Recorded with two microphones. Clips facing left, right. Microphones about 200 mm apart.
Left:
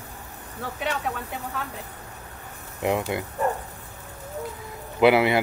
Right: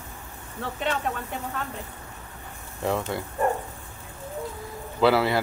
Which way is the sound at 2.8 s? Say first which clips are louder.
Left 2 dB; 15° left (ahead or behind).